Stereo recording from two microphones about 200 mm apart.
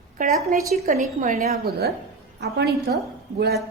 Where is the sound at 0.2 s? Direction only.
45° right (ahead or behind).